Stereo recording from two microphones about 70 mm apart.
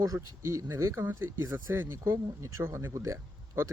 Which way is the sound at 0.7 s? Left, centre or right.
Right.